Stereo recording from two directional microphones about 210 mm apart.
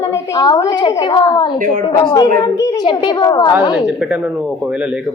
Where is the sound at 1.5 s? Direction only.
40° right (ahead or behind).